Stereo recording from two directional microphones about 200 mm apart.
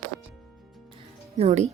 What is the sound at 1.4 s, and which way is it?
Speech, 35° right (ahead or behind).